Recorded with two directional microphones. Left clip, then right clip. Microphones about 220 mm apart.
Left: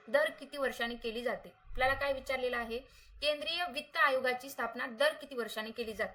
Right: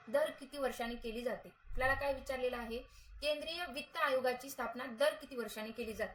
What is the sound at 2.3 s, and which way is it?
Speech, centre (ahead or behind).